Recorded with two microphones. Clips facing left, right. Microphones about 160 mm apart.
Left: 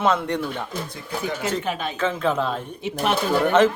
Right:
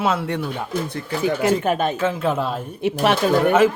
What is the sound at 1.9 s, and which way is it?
Speech, 5° right (ahead or behind).